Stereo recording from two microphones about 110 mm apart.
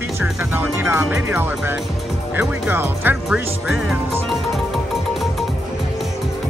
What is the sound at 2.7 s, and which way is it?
Music, 20° right (ahead or behind).